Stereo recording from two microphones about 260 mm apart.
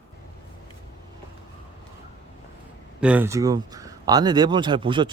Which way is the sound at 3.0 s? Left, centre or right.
Centre.